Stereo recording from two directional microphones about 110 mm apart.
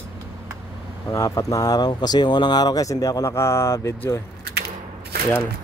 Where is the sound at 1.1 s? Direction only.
30° left (ahead or behind).